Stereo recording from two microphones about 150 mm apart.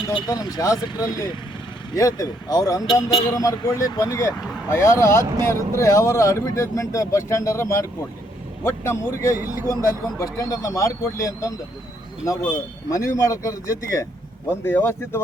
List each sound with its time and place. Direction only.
0.0 s a man's voice: 30° left (ahead or behind); by 15.2 s 15° left (ahead or behind)